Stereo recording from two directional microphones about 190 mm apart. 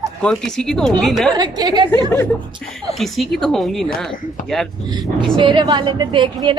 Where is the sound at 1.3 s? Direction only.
20° right (ahead or behind).